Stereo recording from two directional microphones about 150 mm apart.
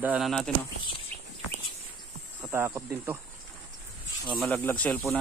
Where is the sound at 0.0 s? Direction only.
10° right (ahead or behind).